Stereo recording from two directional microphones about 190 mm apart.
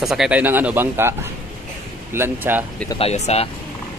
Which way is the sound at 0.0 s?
Centre (ahead or behind).